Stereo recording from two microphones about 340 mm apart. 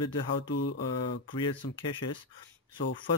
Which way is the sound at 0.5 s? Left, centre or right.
Left.